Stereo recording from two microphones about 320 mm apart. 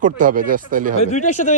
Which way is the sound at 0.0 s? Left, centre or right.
Right.